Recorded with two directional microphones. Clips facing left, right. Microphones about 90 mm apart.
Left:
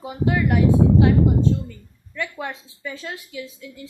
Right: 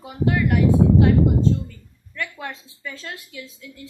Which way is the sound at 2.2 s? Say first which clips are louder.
Left 2 dB; 15° left (ahead or behind).